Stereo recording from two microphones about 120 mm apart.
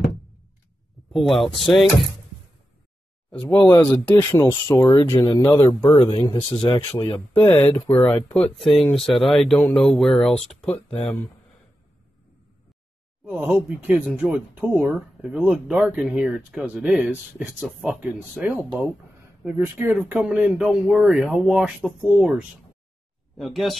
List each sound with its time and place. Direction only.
1.1 s speech: centre (ahead or behind)
3.4 s speech: 20° left (ahead or behind)
5.9 s speech: 50° left (ahead or behind)
7.1 s speech: 20° left (ahead or behind)
7.9 s speech: 5° left (ahead or behind)
13.3 s speech: 15° right (ahead or behind)
14.7 s speech: 20° right (ahead or behind); by 23.8 s centre (ahead or behind)